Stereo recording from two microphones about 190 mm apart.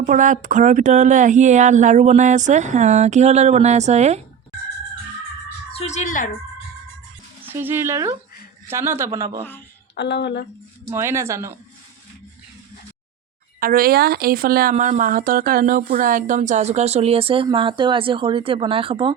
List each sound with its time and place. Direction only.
0.0 s speech: 40° right (ahead or behind)
5.7 s speech: 35° left (ahead or behind)
7.4 s a man's voice: 10° right (ahead or behind)
9.9 s speech: 65° left (ahead or behind)
10.8 s a man's voice: 15° right (ahead or behind)
13.6 s speech: 50° right (ahead or behind); by 19.1 s 30° right (ahead or behind)